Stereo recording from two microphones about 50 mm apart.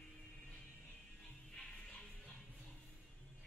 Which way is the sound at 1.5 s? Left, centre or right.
Centre.